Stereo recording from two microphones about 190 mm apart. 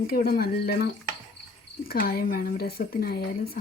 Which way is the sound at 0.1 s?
55° left (ahead or behind).